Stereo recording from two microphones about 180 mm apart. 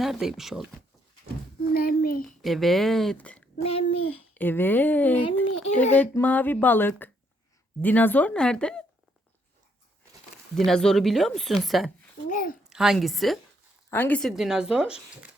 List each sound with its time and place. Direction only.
0.0 s speech: centre (ahead or behind)
1.7 s a child's voice: 55° left (ahead or behind)
2.2 s speech: centre (ahead or behind)
3.6 s speech: 30° left (ahead or behind)
4.4 s speech: 10° left (ahead or behind)
5.5 s speech: 35° left (ahead or behind)
5.9 s speech: 10° left (ahead or behind)
10.7 s speech: 5° left (ahead or behind)
12.3 s a child's voice: 50° left (ahead or behind)
12.7 s speech: centre (ahead or behind)